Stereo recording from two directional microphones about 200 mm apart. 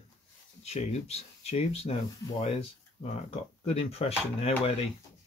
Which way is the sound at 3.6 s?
30° left (ahead or behind).